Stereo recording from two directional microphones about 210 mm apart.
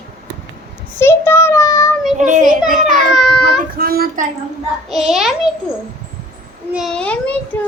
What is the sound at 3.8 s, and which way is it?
Child singing, 45° right (ahead or behind).